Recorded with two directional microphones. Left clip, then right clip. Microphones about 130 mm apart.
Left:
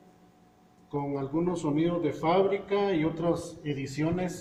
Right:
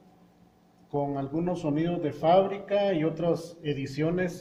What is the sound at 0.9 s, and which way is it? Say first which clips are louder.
A man's voice: right 2 dB; 40° right (ahead or behind).